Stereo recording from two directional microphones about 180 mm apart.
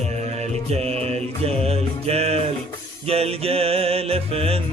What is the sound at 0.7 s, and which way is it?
Music, 35° right (ahead or behind).